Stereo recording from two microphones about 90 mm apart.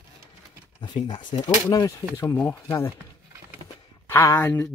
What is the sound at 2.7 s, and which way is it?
Speech, 30° left (ahead or behind).